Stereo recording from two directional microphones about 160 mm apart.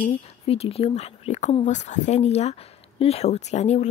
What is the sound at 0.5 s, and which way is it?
Speech, 40° left (ahead or behind).